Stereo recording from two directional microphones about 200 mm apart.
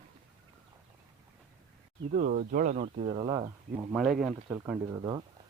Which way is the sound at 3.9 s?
Centre (ahead or behind).